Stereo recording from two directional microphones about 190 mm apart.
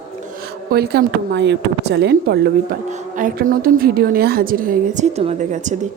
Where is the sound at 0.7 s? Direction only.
55° right (ahead or behind).